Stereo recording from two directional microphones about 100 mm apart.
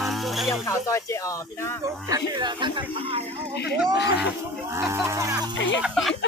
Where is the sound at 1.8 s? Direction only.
35° right (ahead or behind).